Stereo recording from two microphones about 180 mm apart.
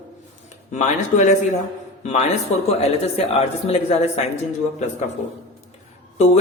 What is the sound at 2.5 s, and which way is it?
Speech, 40° left (ahead or behind).